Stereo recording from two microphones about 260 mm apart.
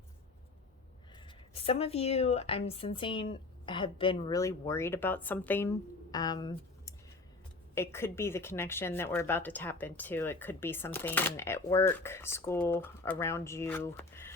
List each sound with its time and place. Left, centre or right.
1.1 s a woman's voice: centre